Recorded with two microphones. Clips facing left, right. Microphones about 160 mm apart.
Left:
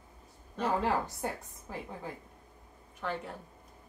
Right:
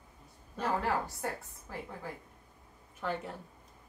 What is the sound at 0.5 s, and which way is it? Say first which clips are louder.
A woman's voice: left 2 dB; 15° left (ahead or behind).